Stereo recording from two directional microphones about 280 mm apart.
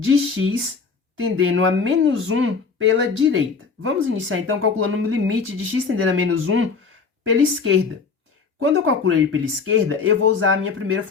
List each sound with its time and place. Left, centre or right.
0.0 s speech: right